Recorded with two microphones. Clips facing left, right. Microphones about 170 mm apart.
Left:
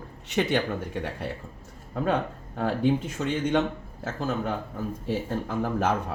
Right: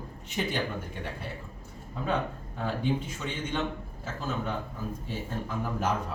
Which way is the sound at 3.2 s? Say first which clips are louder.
Left 8 dB; 50° left (ahead or behind).